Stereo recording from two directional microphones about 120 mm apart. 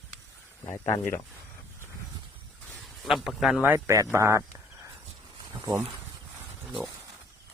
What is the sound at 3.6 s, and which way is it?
Speech, 15° right (ahead or behind).